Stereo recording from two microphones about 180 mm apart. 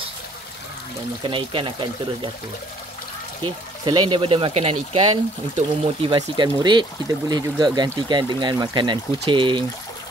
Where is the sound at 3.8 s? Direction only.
25° right (ahead or behind).